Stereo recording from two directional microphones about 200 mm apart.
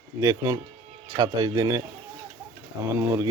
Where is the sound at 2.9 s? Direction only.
15° right (ahead or behind).